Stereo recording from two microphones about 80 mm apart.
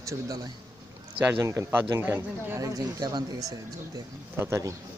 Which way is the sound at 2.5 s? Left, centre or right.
Right.